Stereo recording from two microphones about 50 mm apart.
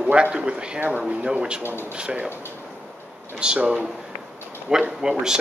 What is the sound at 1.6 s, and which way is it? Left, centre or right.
Speech, left.